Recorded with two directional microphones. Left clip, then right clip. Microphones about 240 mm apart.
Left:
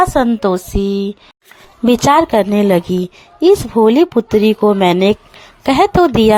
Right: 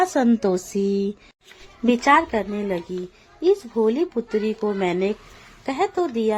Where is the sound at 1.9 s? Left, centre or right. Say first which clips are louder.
Left 7 dB; left.